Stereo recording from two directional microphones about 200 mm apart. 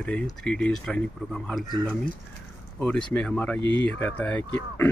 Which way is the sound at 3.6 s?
65° left (ahead or behind).